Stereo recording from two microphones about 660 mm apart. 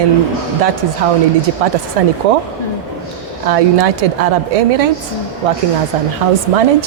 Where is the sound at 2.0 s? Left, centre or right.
Right.